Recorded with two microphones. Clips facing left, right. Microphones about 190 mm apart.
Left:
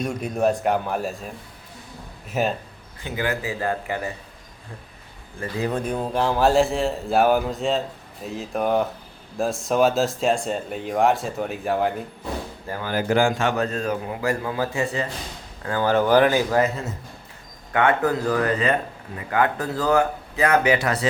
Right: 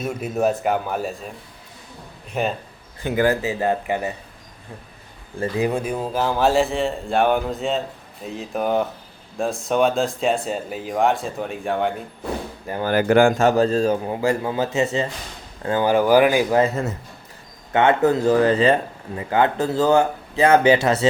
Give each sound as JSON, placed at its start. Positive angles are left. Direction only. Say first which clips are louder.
{"t": 0.0, "sound": "speech", "louder": "right 1 dB", "side_deg": -5}
{"t": 2.3, "sound": "speech", "louder": "even", "side_deg": 0}
{"t": 3.0, "sound": "a man's voice", "louder": "right 7 dB", "side_deg": -50}
{"t": 3.4, "sound": "speech", "louder": "right 4 dB", "side_deg": -20}
{"t": 5.5, "sound": "speech", "louder": "right 2 dB", "side_deg": -10}
{"t": 12.9, "sound": "a man's voice", "louder": "right 5 dB", "side_deg": -65}
{"t": 17.7, "sound": "speech", "louder": "right 3 dB", "side_deg": -25}